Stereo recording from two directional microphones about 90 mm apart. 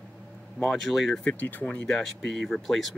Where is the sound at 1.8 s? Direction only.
5° left (ahead or behind).